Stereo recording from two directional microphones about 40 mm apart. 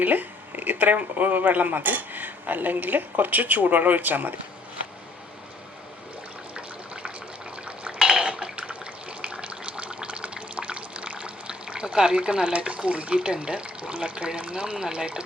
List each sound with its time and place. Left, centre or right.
0.0 s speech: right
7.9 s water: centre
8.2 s water: right
12.5 s speech: right